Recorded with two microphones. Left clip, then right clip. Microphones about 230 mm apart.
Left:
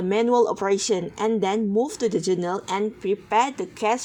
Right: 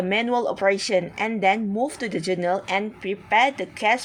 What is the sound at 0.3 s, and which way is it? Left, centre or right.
A woman's voice, centre.